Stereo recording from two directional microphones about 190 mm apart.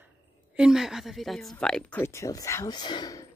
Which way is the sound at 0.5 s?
5° right (ahead or behind).